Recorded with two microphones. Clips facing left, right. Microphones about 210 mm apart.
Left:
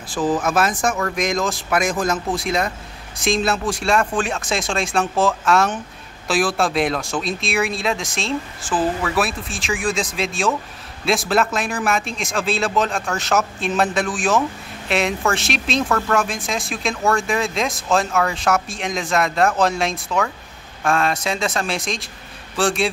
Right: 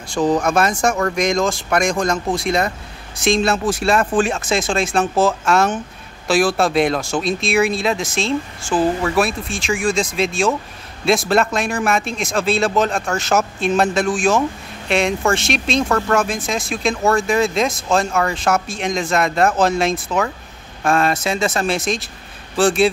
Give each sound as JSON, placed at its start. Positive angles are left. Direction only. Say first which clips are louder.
{"t": 0.1, "sound": "speech", "louder": "right 3 dB", "side_deg": 5}